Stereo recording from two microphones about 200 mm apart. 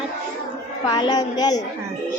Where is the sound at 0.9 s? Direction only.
20° left (ahead or behind).